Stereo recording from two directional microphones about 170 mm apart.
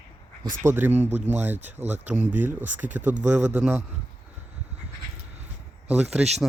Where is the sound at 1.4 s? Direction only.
10° right (ahead or behind).